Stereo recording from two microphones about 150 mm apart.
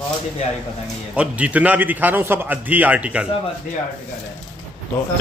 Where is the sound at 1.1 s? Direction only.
10° right (ahead or behind).